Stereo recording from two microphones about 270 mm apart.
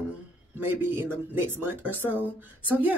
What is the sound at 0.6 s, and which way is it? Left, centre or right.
Speech, centre.